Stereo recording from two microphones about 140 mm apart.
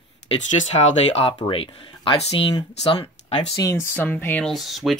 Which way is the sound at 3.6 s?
20° left (ahead or behind).